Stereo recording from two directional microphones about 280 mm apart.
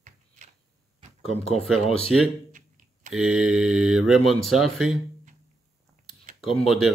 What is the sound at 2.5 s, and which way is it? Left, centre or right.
Computer keyboard, right.